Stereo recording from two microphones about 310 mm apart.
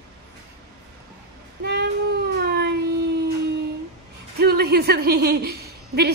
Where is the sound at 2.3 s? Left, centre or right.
Right.